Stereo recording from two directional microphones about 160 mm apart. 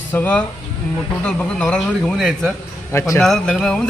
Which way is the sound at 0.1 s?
10° left (ahead or behind).